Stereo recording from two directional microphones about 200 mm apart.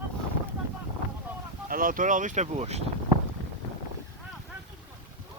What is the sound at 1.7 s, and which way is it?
Speech, 45° right (ahead or behind).